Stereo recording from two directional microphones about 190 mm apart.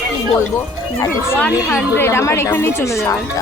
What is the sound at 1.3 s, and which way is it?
A woman's voice, 10° left (ahead or behind).